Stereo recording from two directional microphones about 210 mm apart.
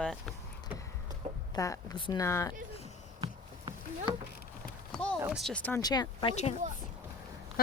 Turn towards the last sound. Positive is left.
turn(degrees=25)  # may be behind; listen again after turning